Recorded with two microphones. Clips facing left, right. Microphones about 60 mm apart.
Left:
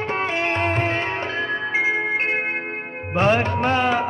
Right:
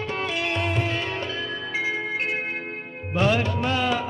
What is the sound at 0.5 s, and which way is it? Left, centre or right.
Music, left.